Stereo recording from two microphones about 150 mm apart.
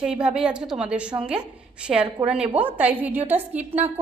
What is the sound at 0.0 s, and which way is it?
A woman's voice, 5° right (ahead or behind).